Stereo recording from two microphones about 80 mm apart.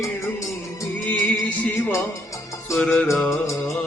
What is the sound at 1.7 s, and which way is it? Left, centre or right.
Music, left.